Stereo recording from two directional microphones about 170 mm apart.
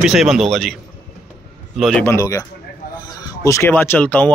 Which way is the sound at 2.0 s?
20° left (ahead or behind).